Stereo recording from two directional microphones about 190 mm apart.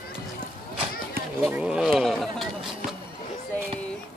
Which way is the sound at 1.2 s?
55° right (ahead or behind).